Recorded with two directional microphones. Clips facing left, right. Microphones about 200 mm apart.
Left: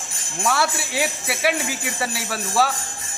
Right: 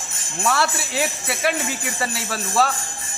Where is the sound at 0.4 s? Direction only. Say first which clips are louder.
Even; centre (ahead or behind).